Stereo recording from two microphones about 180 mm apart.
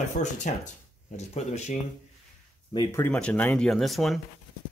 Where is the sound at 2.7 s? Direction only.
20° left (ahead or behind).